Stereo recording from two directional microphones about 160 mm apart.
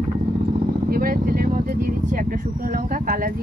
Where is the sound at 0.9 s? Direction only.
65° right (ahead or behind).